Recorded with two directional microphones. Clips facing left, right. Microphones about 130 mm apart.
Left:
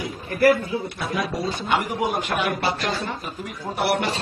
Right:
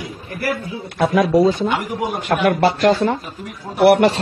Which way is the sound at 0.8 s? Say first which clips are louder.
Right 10 dB; 70° right (ahead or behind).